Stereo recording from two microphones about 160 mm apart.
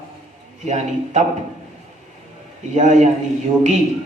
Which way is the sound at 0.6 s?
45° right (ahead or behind).